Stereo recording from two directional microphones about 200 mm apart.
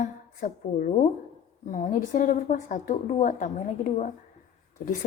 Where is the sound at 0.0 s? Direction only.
40° left (ahead or behind).